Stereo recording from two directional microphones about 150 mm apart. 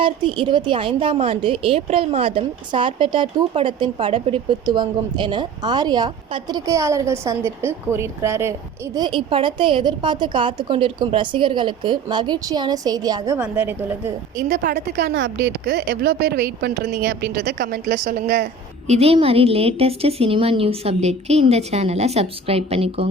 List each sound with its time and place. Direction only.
0.0 s a woman's voice: 35° right (ahead or behind); by 8.5 s 15° right (ahead or behind)
9.0 s a woman's voice: 35° right (ahead or behind)
13.4 s a woman's voice: 10° right (ahead or behind)
14.3 s a woman's voice: 55° right (ahead or behind)
16.0 s a woman's voice: 90° right; by 18.4 s 70° right (ahead or behind)
18.9 s a woman's voice: 40° right (ahead or behind)